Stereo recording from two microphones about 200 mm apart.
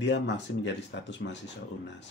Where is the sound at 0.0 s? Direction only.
60° left (ahead or behind).